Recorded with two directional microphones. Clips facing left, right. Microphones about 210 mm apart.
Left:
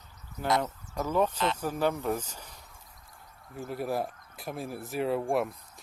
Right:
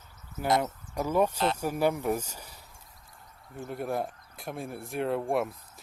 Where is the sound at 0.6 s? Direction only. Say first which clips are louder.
Right 1 dB; 10° right (ahead or behind).